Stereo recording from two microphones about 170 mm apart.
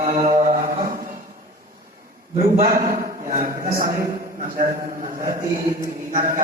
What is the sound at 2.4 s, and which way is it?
A man's voice, 40° right (ahead or behind).